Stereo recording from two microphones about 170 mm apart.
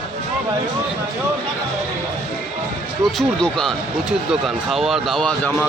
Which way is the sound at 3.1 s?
Centre (ahead or behind).